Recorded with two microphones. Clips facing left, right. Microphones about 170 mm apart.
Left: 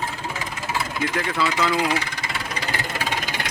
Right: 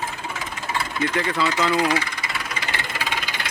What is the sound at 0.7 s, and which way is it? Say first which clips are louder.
Vehicle: right 1 dB; centre (ahead or behind).